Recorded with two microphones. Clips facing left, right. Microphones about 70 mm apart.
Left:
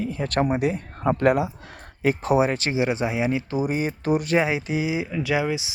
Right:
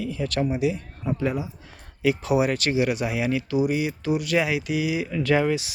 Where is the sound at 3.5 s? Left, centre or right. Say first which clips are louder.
Right 1 dB; left.